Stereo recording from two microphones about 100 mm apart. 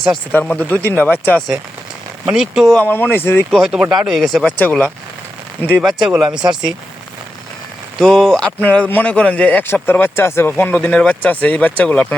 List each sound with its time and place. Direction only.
0.3 s a man's voice: 15° left (ahead or behind)
2.2 s speech: 5° right (ahead or behind)
2.8 s speech: 20° left (ahead or behind)
3.5 s speech: 5° right (ahead or behind)
4.4 s a man's voice: 15° left (ahead or behind)
5.8 s speech: 5° right (ahead or behind)
7.9 s speech: 5° left (ahead or behind)
8.6 s a man's voice: 15° left (ahead or behind)